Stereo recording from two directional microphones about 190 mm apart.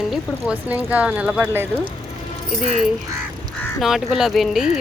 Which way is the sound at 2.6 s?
40° left (ahead or behind).